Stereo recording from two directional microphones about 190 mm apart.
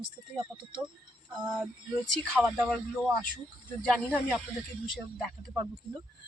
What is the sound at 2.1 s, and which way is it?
Speech, centre (ahead or behind).